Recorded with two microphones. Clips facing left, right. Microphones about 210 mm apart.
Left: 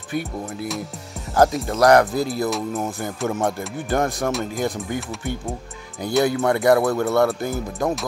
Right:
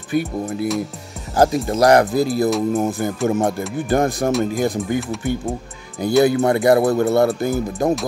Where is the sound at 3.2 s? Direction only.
30° right (ahead or behind).